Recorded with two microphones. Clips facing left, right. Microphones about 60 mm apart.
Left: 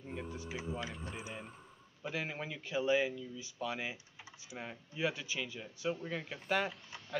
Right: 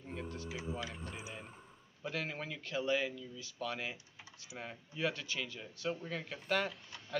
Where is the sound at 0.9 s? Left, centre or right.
Centre.